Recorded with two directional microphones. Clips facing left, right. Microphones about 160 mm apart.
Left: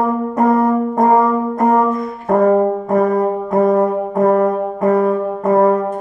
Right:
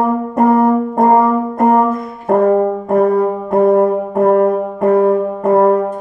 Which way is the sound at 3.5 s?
30° right (ahead or behind).